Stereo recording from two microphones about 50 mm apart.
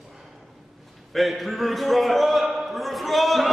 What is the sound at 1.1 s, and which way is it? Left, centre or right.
A man's voice, centre.